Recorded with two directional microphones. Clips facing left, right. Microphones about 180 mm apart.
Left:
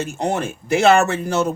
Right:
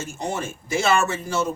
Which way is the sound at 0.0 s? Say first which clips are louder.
Left 6 dB; 65° left (ahead or behind).